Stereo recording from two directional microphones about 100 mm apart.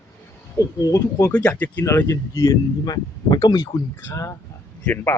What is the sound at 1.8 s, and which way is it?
Speech, 30° left (ahead or behind).